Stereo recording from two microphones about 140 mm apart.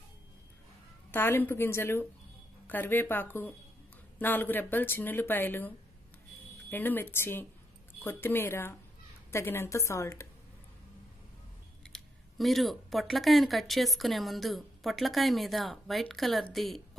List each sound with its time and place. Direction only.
1.1 s speech: 15° left (ahead or behind)
6.7 s a woman's voice: 15° left (ahead or behind)
11.9 s speech: centre (ahead or behind)